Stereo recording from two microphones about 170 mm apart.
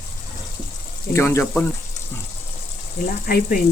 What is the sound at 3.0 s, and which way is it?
Speech, 55° left (ahead or behind).